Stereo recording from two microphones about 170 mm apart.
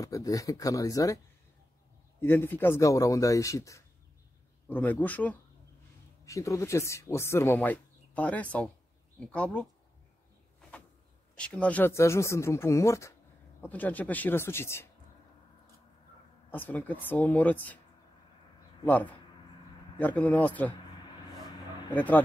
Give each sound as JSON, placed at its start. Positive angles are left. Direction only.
{"t": 0.0, "sound": "speech", "side_deg": 20}
{"t": 11.3, "sound": "speech", "side_deg": 5}
{"t": 16.4, "sound": "speech", "side_deg": 10}
{"t": 18.9, "sound": "speech", "side_deg": 10}
{"t": 21.9, "sound": "speech", "side_deg": 10}